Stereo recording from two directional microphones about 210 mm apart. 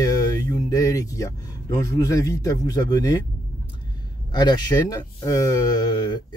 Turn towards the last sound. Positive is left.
turn(degrees=20)  # may be behind; listen again after turning